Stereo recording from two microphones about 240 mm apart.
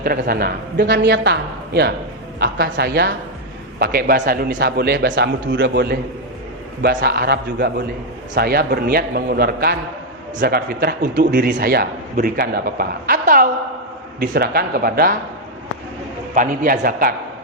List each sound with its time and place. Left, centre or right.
0.0 s a man's voice: right
16.3 s a man's voice: right